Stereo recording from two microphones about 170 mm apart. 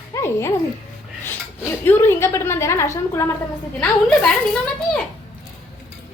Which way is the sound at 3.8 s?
5° left (ahead or behind).